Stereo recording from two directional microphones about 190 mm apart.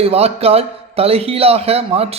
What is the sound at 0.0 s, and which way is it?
Speech, 30° right (ahead or behind).